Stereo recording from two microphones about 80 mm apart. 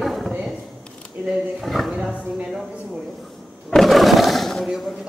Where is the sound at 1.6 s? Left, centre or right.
Centre.